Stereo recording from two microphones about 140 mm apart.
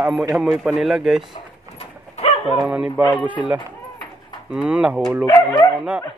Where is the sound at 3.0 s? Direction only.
10° left (ahead or behind).